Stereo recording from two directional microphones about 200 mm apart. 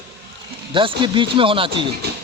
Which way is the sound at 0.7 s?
25° right (ahead or behind).